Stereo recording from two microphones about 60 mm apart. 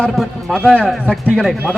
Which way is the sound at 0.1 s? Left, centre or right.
Centre.